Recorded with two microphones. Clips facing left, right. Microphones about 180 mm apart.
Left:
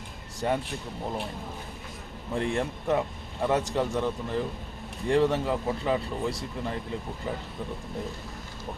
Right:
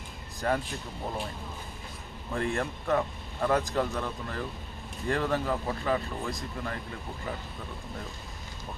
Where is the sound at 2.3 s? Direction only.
25° left (ahead or behind).